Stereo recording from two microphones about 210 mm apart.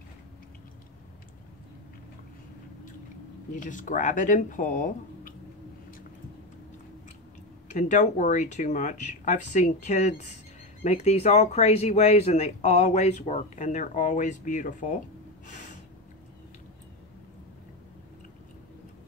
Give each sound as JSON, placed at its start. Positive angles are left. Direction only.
{"t": 3.5, "sound": "speech", "side_deg": 40}
{"t": 7.7, "sound": "speech", "side_deg": 35}
{"t": 15.4, "sound": "snort", "side_deg": 35}